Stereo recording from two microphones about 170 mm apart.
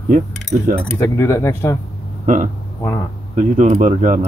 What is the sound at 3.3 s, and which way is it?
Speech, 45° right (ahead or behind).